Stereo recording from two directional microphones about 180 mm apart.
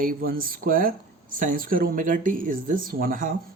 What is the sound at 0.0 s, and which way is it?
Speech, 55° right (ahead or behind).